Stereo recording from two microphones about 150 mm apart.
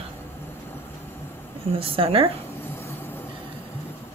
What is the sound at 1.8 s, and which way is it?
Speech, 40° right (ahead or behind).